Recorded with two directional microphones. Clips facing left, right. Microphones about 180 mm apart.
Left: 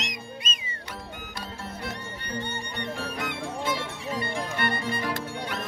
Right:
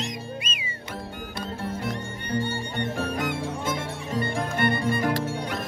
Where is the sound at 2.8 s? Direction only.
45° right (ahead or behind).